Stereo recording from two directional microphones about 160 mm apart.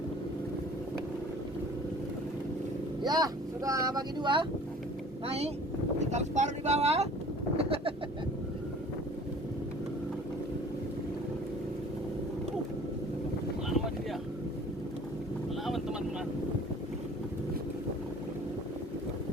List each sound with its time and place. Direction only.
3.0 s speech: 25° right (ahead or behind)
5.2 s speech: 40° right (ahead or behind)
7.5 s bird: 35° right (ahead or behind)
13.7 s boat: centre (ahead or behind)
15.6 s boat: 5° right (ahead or behind)